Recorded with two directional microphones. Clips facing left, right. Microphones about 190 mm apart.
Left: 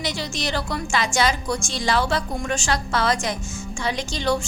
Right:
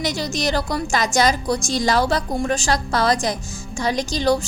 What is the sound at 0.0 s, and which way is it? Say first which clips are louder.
A woman's voice: right 5 dB; 40° right (ahead or behind).